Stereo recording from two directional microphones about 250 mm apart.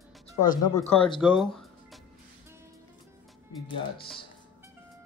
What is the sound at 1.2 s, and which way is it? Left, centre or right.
Speech, centre.